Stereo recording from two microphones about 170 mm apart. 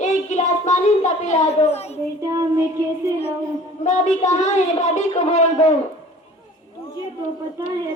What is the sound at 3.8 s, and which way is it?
Speech, 45° left (ahead or behind).